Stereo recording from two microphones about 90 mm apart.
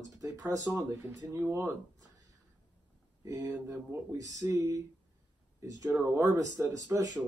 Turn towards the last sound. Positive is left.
turn(degrees=-40)  # may be behind; listen again after turning